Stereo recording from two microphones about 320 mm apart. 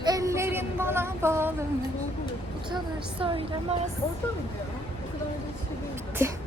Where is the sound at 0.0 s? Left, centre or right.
Centre.